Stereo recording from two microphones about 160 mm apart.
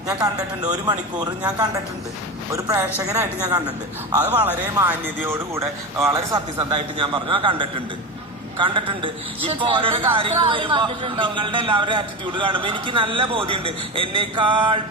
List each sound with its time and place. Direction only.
0.1 s a man's voice: 25° right (ahead or behind)